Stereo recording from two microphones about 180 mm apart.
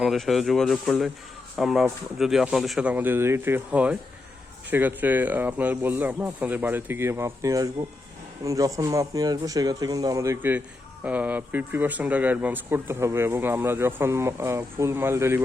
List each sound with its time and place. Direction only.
0.0 s speech: centre (ahead or behind)